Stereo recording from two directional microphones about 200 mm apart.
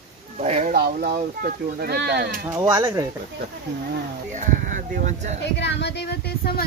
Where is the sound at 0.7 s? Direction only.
50° right (ahead or behind).